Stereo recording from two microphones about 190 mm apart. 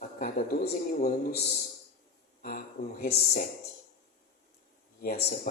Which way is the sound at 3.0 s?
50° left (ahead or behind).